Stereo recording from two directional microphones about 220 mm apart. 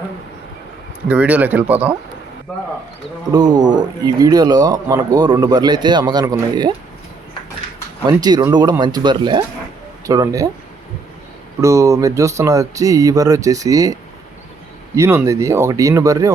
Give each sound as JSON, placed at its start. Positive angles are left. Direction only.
{"t": 1.0, "sound": "speech", "side_deg": -5}
{"t": 3.3, "sound": "speech", "side_deg": -20}
{"t": 8.0, "sound": "speech", "side_deg": -20}
{"t": 11.6, "sound": "speech", "side_deg": -15}
{"t": 14.9, "sound": "speech", "side_deg": -10}